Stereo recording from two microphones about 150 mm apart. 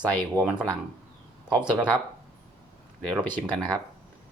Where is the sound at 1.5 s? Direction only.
5° right (ahead or behind).